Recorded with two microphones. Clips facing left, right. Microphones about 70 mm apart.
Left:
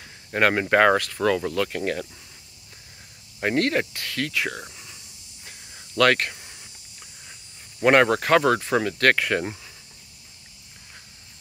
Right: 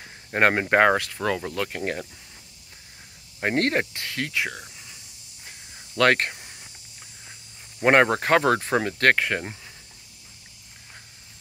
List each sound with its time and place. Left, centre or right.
0.0 s speech: right
3.5 s speech: right
5.9 s speech: right
6.3 s cricket: centre
7.8 s speech: right